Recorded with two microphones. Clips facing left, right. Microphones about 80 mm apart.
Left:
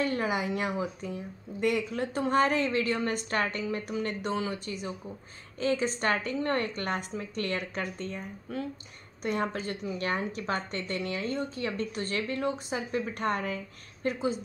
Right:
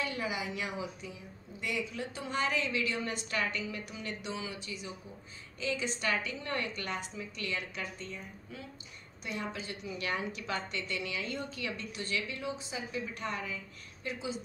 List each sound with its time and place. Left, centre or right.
0.0 s speech: left